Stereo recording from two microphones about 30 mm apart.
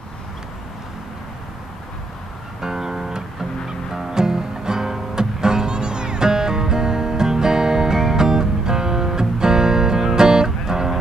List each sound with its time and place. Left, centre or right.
2.6 s music: centre